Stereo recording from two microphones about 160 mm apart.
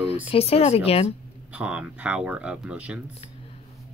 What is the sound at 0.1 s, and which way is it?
Speech, 40° left (ahead or behind).